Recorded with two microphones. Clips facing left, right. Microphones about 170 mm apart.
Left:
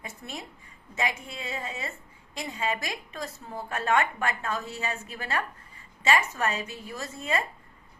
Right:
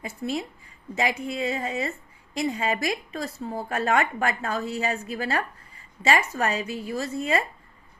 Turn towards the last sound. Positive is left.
turn(degrees=-35)  # may be behind; listen again after turning